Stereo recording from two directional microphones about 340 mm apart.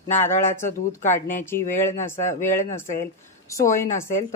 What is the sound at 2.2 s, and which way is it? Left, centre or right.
Speech, left.